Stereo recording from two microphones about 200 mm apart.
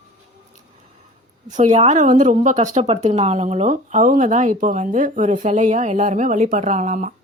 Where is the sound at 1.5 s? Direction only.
35° right (ahead or behind).